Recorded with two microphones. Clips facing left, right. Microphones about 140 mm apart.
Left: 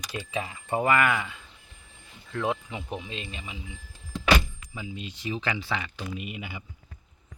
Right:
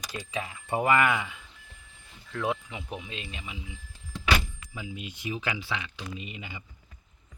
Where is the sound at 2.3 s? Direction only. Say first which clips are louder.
Left 2 dB; centre (ahead or behind).